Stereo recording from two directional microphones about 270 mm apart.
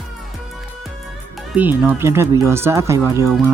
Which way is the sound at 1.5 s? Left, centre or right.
Centre.